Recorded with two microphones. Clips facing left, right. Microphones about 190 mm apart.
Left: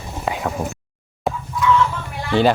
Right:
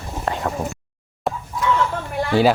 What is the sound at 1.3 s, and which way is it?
Chicken, centre (ahead or behind).